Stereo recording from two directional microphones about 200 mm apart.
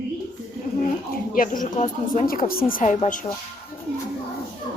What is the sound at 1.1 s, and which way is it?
Speech, 45° left (ahead or behind).